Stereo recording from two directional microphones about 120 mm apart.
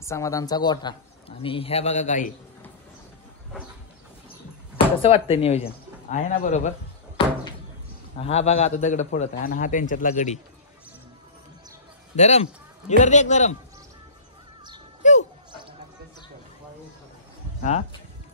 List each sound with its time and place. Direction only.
0.0 s speech: 25° left (ahead or behind)
1.4 s a man's voice: 50° left (ahead or behind); by 2.2 s 80° left
4.7 s speech: 50° left (ahead or behind)
6.0 s a man's voice: 70° left (ahead or behind)
7.2 s door: 50° left (ahead or behind)
8.2 s a man's voice: 60° left (ahead or behind); by 10.4 s 85° left
12.2 s a man's voice: 70° left (ahead or behind)
15.0 s a sound: 90° left